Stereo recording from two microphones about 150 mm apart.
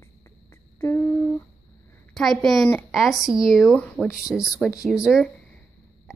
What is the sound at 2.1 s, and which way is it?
A woman's voice, centre (ahead or behind).